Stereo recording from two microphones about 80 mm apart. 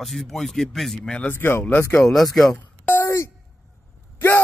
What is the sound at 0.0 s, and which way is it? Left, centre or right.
Speech, centre.